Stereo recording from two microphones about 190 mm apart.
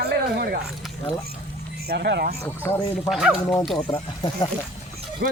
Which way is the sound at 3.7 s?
25° left (ahead or behind).